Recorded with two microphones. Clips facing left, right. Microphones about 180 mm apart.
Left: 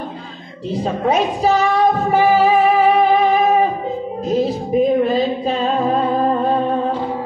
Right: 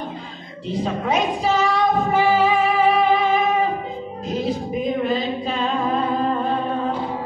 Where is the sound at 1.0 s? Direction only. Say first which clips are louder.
Left 6 dB; 35° left (ahead or behind).